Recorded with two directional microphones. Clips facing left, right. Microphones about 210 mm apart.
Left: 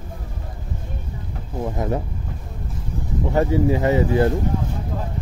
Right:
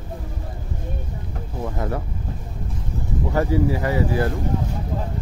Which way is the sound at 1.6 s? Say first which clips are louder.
Left 3 dB; 20° left (ahead or behind).